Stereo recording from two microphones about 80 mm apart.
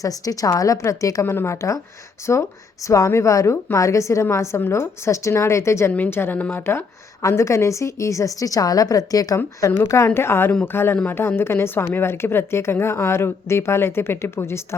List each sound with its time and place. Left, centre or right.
0.0 s a woman's voice: left
1.2 s speech: left
2.8 s a woman's voice: left
5.9 s speech: left
10.2 s speech: left